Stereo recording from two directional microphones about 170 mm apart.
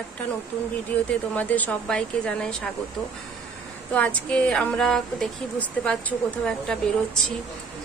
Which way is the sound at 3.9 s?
10° left (ahead or behind).